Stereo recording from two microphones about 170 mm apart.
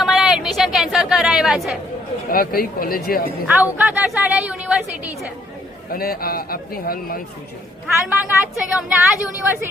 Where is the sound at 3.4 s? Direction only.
10° right (ahead or behind).